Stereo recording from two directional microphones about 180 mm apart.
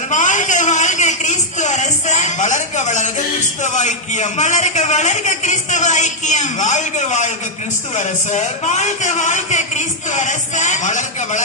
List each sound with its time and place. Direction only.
0.1 s a sound: 45° left (ahead or behind)
3.6 s a man's voice: 40° left (ahead or behind)
8.3 s a man's voice: 40° left (ahead or behind)